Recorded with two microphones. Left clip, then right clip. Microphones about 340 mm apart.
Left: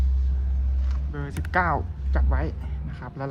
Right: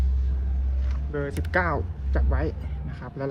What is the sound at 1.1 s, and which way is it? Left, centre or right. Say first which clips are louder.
Speech: even; centre.